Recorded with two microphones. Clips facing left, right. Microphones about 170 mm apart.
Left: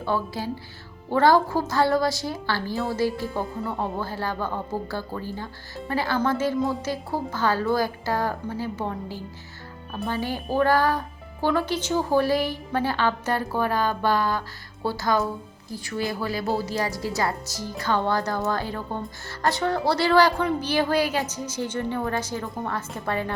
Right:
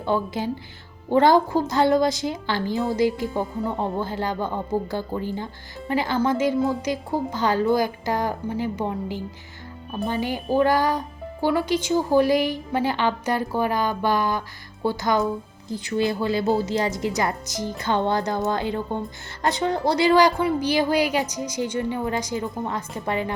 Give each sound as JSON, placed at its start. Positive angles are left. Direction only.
{"t": 0.0, "sound": "a woman's voice", "side_deg": -20}